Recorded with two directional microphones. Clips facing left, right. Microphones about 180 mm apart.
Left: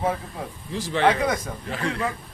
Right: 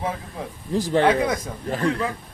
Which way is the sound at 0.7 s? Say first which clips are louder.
Right 3 dB; 45° right (ahead or behind).